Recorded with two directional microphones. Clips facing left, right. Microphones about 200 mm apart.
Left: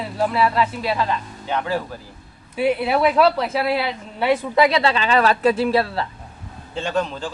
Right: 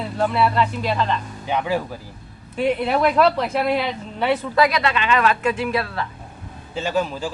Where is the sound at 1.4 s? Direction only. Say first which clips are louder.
Right 1 dB; 15° right (ahead or behind).